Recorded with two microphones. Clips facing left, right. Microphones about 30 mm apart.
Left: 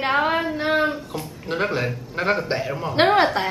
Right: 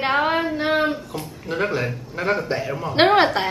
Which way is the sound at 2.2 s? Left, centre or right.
Left.